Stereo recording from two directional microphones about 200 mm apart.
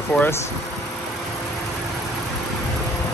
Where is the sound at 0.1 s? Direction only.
10° left (ahead or behind).